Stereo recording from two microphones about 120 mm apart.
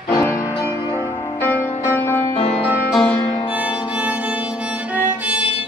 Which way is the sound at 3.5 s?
10° right (ahead or behind).